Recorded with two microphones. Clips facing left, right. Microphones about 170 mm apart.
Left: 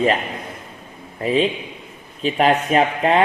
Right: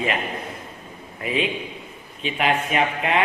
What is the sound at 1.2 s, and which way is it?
A man's voice, 35° left (ahead or behind).